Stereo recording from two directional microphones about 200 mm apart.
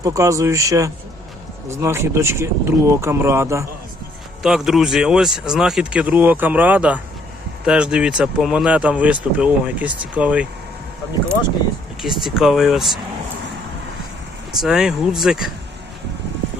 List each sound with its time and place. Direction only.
0.0 s speech: 15° right (ahead or behind)
4.4 s speech: centre (ahead or behind)
12.0 s speech: centre (ahead or behind)
14.6 s speech: 5° right (ahead or behind)